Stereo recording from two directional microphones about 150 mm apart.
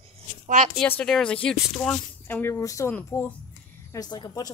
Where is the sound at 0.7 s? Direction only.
10° left (ahead or behind).